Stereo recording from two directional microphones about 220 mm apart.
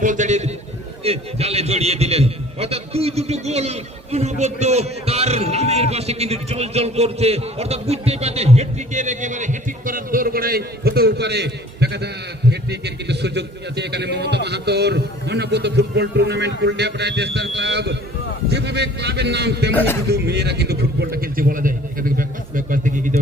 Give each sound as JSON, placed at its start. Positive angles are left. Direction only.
{"t": 0.0, "sound": "a man's voice", "side_deg": -35}
{"t": 19.7, "sound": "speech", "side_deg": 10}
{"t": 20.1, "sound": "a sound", "side_deg": -50}